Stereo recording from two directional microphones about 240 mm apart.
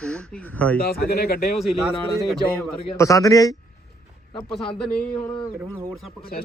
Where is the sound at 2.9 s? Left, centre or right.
Centre.